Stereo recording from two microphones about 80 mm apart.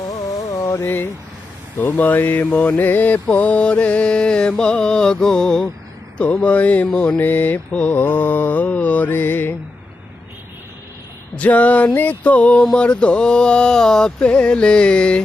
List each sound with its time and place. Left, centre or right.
0.4 s carnatic music: left
0.9 s mantra: left
11.3 s mantra: centre